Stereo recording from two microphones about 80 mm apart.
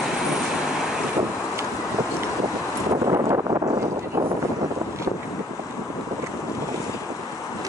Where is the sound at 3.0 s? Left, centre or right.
Right.